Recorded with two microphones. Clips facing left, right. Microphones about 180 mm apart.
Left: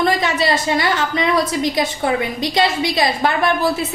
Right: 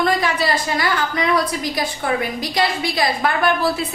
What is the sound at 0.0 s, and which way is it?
A woman's voice, 25° left (ahead or behind).